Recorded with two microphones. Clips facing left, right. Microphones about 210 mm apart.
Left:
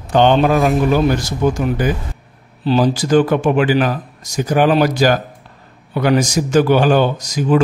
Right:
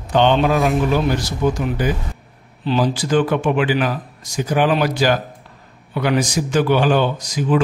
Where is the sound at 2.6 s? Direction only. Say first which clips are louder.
Left 4 dB; 40° left (ahead or behind).